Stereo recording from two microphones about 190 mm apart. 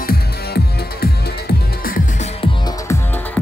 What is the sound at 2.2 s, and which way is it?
Music, 30° left (ahead or behind).